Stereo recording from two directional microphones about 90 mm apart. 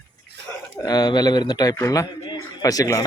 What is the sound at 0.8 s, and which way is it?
Speech, 50° left (ahead or behind).